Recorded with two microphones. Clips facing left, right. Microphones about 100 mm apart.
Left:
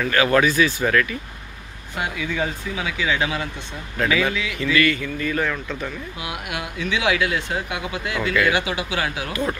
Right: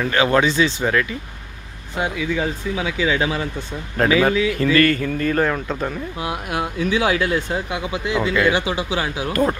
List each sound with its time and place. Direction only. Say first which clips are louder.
0.0 s a man's voice: right 1 dB; 25° right (ahead or behind)
8.0 s speech: right 3 dB; 25° right (ahead or behind)